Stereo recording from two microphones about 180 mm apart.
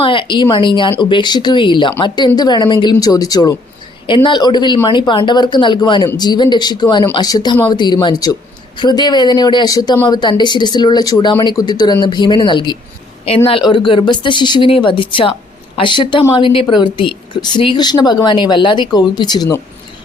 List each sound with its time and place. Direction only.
0.0 s a woman's voice: 30° left (ahead or behind)